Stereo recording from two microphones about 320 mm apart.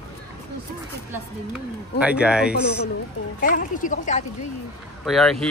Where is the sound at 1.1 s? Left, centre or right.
Centre.